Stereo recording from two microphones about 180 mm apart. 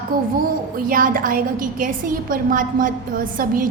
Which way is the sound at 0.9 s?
50° right (ahead or behind).